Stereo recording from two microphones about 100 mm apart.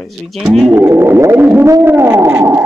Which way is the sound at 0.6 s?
20° right (ahead or behind).